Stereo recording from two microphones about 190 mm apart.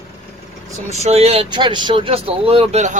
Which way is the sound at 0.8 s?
35° right (ahead or behind).